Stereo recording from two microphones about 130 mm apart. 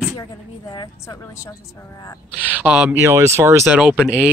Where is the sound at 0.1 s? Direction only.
30° left (ahead or behind).